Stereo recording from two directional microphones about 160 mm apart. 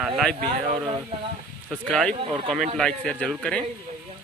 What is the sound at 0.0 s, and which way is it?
Speech, centre (ahead or behind).